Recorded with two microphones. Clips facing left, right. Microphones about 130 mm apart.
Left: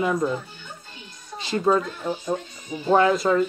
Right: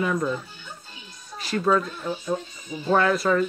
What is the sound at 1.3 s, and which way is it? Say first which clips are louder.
Speech: left 1 dB; 25° left (ahead or behind).